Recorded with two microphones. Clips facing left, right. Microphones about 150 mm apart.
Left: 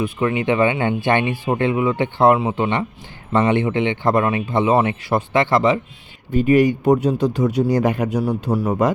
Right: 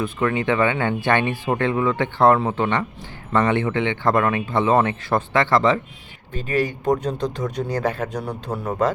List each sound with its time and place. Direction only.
0.0 s speech: 15° left (ahead or behind)